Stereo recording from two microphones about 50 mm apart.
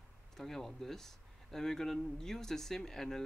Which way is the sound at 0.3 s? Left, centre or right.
Centre.